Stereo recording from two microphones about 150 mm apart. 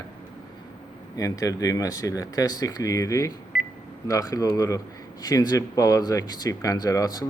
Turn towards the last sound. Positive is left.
turn(degrees=25)  # may be behind; listen again after turning